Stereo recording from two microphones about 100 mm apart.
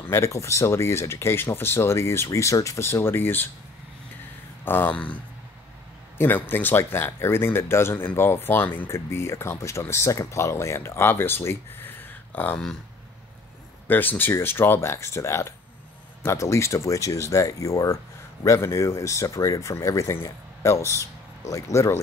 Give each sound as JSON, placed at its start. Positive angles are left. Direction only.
{"t": 0.1, "sound": "speech", "side_deg": 30}
{"t": 4.6, "sound": "speech", "side_deg": 20}
{"t": 13.8, "sound": "speech", "side_deg": 20}